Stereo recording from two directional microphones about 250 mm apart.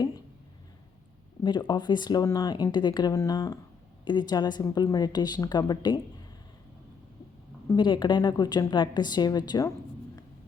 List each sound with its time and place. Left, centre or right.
1.5 s speech: centre
7.7 s speech: centre